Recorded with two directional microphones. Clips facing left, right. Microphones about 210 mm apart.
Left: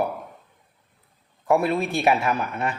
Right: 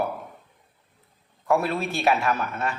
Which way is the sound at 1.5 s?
15° left (ahead or behind).